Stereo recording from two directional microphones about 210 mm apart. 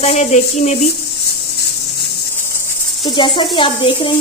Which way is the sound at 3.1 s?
25° left (ahead or behind).